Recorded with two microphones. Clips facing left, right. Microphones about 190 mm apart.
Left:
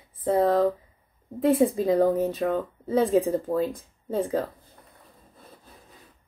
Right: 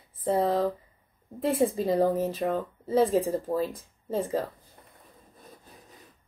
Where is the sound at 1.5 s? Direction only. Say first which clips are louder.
Right 1 dB; centre (ahead or behind).